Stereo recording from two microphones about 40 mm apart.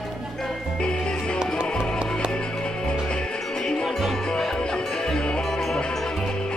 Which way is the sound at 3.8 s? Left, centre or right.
Centre.